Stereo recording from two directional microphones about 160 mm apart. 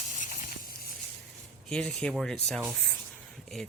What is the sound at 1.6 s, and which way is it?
Speech, 5° left (ahead or behind).